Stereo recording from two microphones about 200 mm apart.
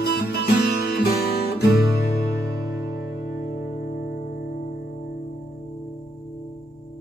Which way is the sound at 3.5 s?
55° left (ahead or behind).